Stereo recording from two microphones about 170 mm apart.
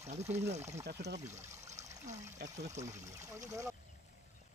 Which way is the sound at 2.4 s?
75° right (ahead or behind).